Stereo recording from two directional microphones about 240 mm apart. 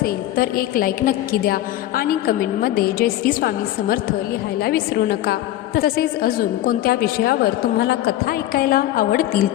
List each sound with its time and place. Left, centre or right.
0.0 s a woman's voice: left